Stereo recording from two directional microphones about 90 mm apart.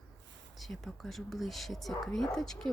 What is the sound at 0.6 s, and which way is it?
Speech, centre (ahead or behind).